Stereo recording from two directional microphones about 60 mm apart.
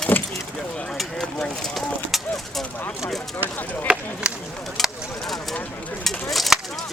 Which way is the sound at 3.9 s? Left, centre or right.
Centre.